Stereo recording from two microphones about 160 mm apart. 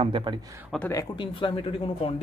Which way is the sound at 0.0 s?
30° right (ahead or behind).